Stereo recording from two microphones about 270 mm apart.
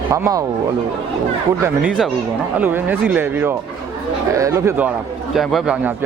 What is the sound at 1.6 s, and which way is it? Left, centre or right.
A man's voice, centre.